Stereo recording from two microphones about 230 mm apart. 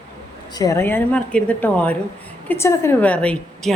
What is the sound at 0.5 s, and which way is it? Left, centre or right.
A woman's voice, centre.